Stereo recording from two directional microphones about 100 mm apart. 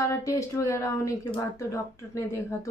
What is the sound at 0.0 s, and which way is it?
Speech, 35° left (ahead or behind).